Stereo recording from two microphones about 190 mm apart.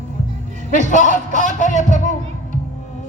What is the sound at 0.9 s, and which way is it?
Speech, 40° left (ahead or behind).